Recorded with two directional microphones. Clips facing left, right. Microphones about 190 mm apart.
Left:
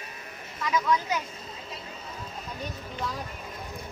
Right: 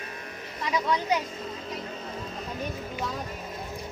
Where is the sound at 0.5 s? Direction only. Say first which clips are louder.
Left 1 dB; 30° right (ahead or behind).